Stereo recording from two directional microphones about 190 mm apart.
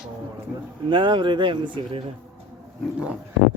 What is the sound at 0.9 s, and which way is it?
Speech, 25° right (ahead or behind).